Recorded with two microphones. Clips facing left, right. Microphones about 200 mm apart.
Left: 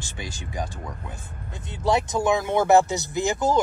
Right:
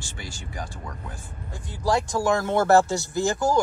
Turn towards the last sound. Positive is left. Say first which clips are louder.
# even
turn(degrees=20)  # may be behind; listen again after turning